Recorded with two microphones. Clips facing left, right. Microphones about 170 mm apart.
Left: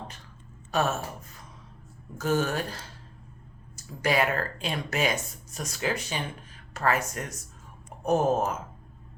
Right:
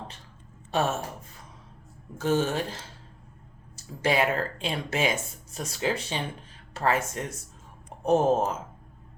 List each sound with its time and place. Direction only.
0.7 s speech: 25° right (ahead or behind)
2.1 s speech: 25° right (ahead or behind)